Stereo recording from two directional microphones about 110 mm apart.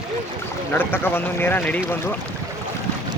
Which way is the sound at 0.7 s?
20° left (ahead or behind).